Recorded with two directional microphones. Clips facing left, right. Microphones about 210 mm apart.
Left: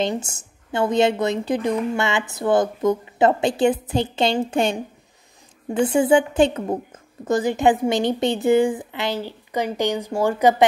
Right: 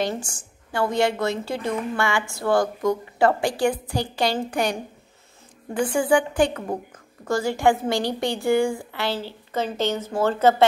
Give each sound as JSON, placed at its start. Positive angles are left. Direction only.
{"t": 0.0, "sound": "a woman's voice", "side_deg": 20}